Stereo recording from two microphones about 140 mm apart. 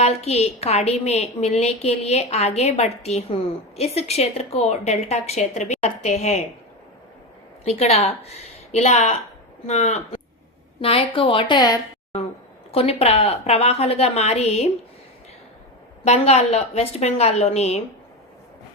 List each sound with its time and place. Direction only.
0.0 s a woman's voice: 50° left (ahead or behind)
7.6 s a woman's voice: 45° left (ahead or behind); by 11.8 s 30° left (ahead or behind)
12.7 s a woman's voice: 45° left (ahead or behind)
16.0 s a woman's voice: 50° left (ahead or behind)